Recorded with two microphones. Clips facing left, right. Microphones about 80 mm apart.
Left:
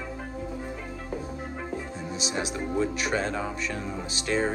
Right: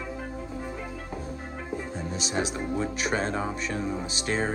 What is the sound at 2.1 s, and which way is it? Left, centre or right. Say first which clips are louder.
Speech: right 1 dB; right.